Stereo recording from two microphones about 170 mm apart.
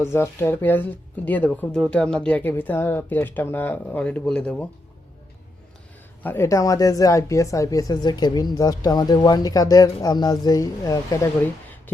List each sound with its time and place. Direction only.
0.0 s speech: 15° left (ahead or behind)
6.2 s speech: 15° left (ahead or behind)